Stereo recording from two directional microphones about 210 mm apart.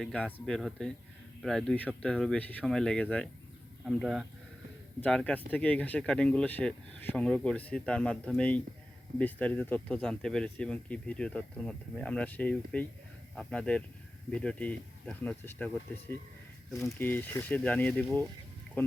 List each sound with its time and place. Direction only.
0.0 s speech: 5° left (ahead or behind)